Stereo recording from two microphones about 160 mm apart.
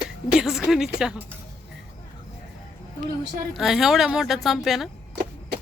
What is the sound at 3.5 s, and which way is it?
Speech, centre (ahead or behind).